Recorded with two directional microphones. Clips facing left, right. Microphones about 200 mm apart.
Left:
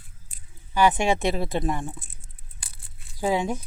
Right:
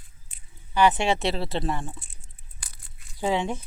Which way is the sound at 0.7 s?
10° left (ahead or behind).